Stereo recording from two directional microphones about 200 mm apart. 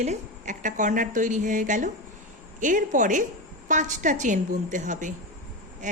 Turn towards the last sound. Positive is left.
turn(degrees=-40)  # may be behind; listen again after turning